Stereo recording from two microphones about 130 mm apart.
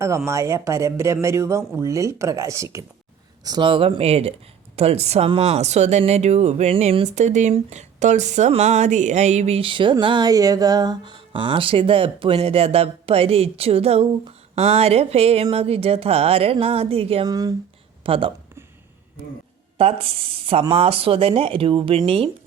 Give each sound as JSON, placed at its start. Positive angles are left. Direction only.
{"t": 0.3, "sound": "speech", "side_deg": -20}
{"t": 3.4, "sound": "speech", "side_deg": -35}
{"t": 9.6, "sound": "speech", "side_deg": -40}
{"t": 17.2, "sound": "speech", "side_deg": -30}
{"t": 18.0, "sound": "speech", "side_deg": -45}
{"t": 19.8, "sound": "speech", "side_deg": -50}